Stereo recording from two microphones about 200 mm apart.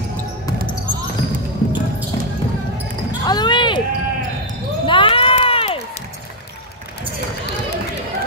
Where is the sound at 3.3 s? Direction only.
20° left (ahead or behind).